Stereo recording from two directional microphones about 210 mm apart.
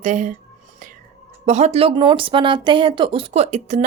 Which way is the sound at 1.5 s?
30° right (ahead or behind).